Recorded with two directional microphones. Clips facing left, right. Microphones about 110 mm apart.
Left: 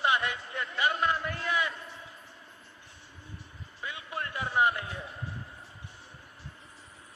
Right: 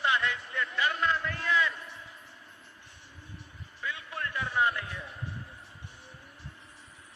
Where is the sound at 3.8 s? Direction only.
15° left (ahead or behind).